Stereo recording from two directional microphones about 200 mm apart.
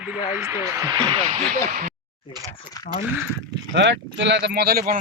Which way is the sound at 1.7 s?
40° right (ahead or behind).